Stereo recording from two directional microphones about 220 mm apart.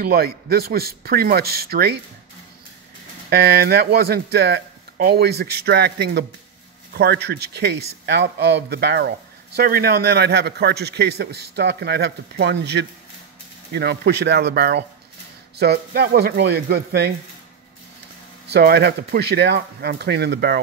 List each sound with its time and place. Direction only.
0.0 s a man's voice: 45° right (ahead or behind)
3.3 s a man's voice: 45° right (ahead or behind)
18.5 s a man's voice: 45° right (ahead or behind)